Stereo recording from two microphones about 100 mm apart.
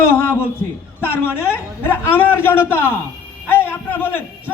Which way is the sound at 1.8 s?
20° left (ahead or behind).